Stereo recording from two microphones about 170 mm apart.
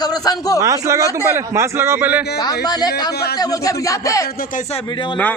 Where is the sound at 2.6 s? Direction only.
25° left (ahead or behind).